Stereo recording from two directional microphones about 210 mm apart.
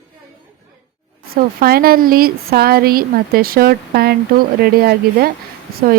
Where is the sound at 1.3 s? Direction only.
45° right (ahead or behind).